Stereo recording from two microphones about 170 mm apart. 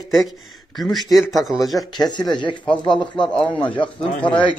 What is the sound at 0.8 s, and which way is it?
Speech, centre (ahead or behind).